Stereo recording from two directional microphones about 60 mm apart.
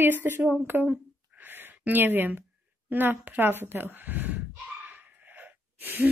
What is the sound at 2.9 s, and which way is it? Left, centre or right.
A woman's voice, right.